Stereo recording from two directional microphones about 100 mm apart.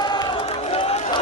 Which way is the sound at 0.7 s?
75° left (ahead or behind).